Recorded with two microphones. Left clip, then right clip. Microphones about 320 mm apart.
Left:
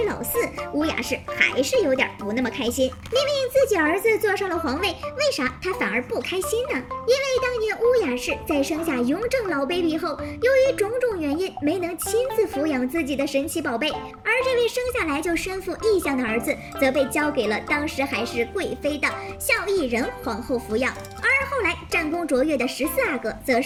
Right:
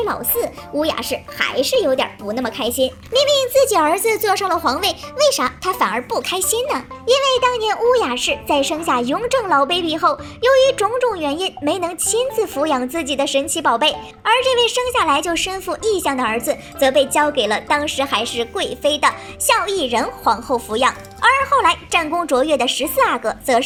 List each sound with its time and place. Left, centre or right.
0.4 s a woman's voice: centre
12.7 s a woman's voice: right
13.1 s a woman's voice: centre
16.2 s a woman's voice: right
17.2 s a woman's voice: centre
20.2 s a woman's voice: right
20.8 s a woman's voice: centre
21.3 s a woman's voice: right
21.9 s a woman's voice: centre
23.1 s a woman's voice: right